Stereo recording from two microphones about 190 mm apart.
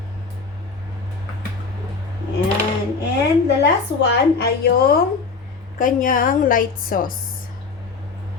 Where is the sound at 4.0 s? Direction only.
60° left (ahead or behind).